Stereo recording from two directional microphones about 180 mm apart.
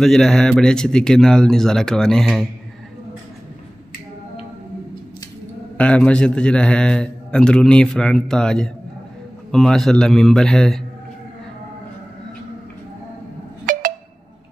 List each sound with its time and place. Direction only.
0.0 s a man's voice: centre (ahead or behind)
5.8 s a man's voice: 5° left (ahead or behind)
13.7 s a sound: 45° right (ahead or behind)